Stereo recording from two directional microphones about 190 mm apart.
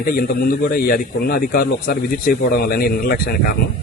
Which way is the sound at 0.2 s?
50° left (ahead or behind).